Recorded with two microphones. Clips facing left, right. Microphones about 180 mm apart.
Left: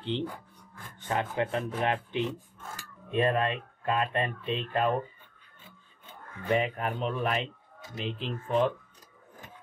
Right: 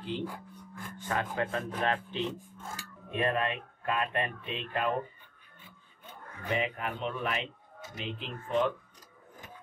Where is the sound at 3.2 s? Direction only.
30° left (ahead or behind).